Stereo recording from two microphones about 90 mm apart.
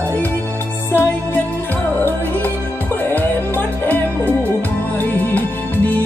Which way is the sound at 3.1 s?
20° left (ahead or behind).